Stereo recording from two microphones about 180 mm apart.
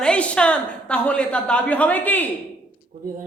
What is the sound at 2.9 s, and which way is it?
Speech, 40° right (ahead or behind).